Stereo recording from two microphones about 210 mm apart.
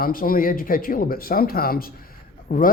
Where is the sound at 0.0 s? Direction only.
45° left (ahead or behind).